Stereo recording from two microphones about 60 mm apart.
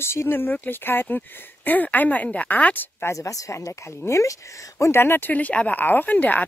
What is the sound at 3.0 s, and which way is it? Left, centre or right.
A woman's voice, left.